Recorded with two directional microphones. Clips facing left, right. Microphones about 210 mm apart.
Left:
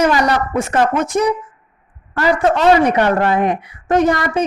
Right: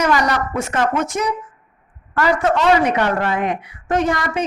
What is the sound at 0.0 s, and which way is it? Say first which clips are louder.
A woman's voice: left 3 dB; 30° left (ahead or behind).